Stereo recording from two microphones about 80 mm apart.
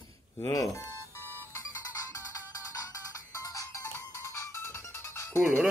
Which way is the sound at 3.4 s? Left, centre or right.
Left.